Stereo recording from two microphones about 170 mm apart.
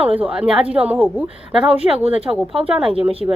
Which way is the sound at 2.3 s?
10° right (ahead or behind).